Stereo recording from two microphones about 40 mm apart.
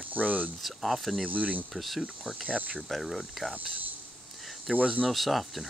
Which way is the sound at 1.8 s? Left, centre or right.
Centre.